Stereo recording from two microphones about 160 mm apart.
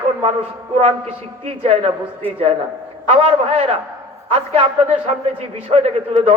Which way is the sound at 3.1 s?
40° right (ahead or behind).